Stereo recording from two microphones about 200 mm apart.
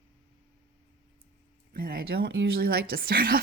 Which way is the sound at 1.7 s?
50° right (ahead or behind).